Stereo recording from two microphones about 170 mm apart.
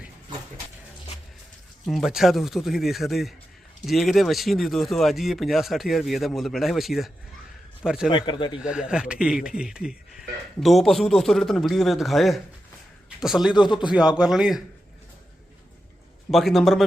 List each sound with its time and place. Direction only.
1.9 s speech: centre (ahead or behind)
8.1 s a man's voice: 25° left (ahead or behind)
8.5 s speech: 5° right (ahead or behind)
16.3 s speech: centre (ahead or behind)